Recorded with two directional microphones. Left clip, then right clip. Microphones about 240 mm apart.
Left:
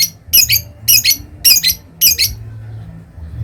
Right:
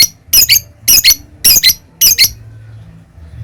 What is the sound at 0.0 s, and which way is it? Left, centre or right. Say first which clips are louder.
Squeak: right 4 dB; right.